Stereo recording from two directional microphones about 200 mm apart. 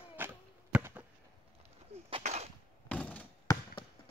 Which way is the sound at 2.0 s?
30° right (ahead or behind).